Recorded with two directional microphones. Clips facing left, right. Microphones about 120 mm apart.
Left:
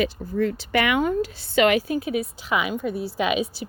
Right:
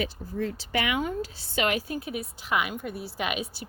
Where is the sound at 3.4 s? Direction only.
90° left.